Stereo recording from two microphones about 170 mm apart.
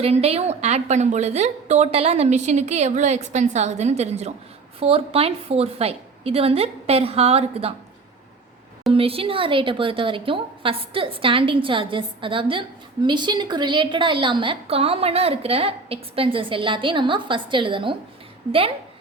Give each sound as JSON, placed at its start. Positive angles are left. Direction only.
{"t": 0.0, "sound": "a woman's voice", "side_deg": -35}
{"t": 8.9, "sound": "a woman's voice", "side_deg": -35}